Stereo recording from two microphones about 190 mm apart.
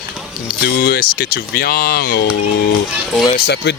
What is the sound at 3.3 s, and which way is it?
Speech, 60° left (ahead or behind).